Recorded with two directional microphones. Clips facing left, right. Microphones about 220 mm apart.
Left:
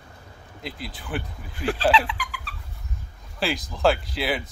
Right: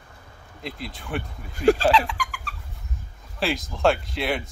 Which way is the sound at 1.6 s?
45° right (ahead or behind).